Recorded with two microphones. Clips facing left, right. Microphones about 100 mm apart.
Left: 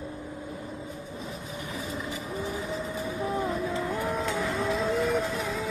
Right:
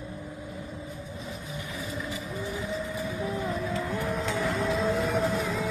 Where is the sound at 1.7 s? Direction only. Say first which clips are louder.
Left 1 dB; 40° left (ahead or behind).